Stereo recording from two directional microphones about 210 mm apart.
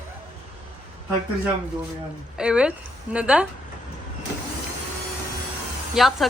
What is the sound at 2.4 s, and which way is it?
Speech, 5° right (ahead or behind).